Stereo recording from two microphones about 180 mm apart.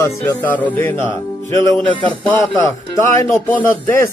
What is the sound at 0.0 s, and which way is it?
Speech, 10° left (ahead or behind).